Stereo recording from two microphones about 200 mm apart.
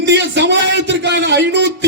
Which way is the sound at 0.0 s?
60° right (ahead or behind).